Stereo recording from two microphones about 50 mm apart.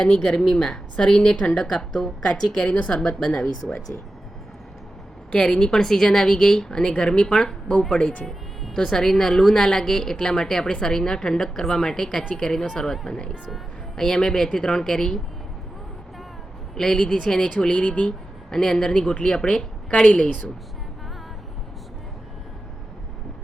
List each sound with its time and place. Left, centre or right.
0.1 s a woman's voice: centre
3.0 s a woman's voice: centre
5.3 s a woman's voice: centre
8.3 s a woman's voice: centre
16.7 s a woman's voice: centre
18.5 s a woman's voice: centre